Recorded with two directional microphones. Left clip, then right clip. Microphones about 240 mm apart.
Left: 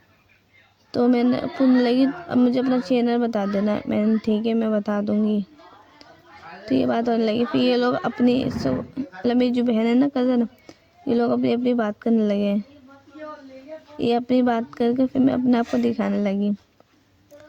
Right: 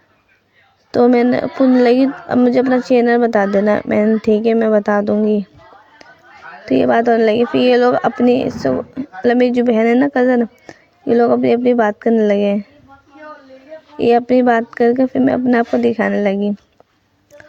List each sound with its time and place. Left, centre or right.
0.9 s speech: right
6.7 s speech: right
14.0 s speech: right